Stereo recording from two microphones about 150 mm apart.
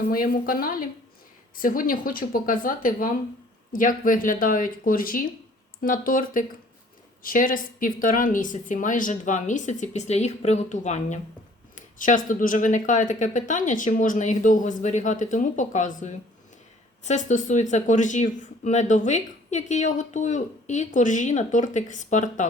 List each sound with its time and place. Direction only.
0.1 s speech: 70° left (ahead or behind); by 22.4 s 55° left (ahead or behind)